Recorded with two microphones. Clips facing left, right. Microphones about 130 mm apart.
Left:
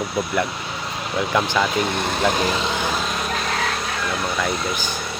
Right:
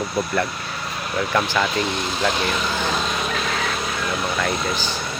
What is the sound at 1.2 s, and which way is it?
Speech, 15° left (ahead or behind).